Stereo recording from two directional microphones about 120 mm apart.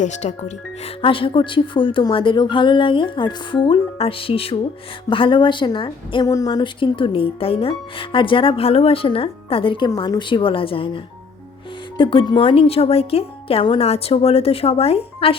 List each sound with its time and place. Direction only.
0.0 s speech: 80° left
1.0 s speech: 45° left (ahead or behind)
6.2 s speech: 30° left (ahead or behind); by 15.4 s 50° left (ahead or behind)